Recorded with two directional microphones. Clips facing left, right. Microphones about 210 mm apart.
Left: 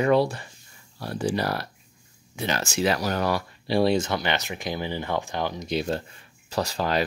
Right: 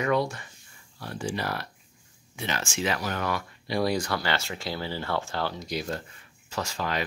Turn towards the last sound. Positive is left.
turn(degrees=35)  # may be behind; listen again after turning